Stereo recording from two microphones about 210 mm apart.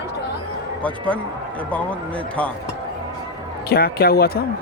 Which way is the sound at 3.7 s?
45° left (ahead or behind).